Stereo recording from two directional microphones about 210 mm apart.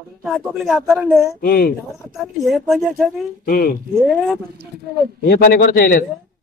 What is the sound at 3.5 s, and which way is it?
Speech, 45° left (ahead or behind).